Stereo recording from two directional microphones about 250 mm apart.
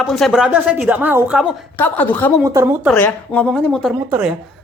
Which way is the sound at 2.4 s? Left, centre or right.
Centre.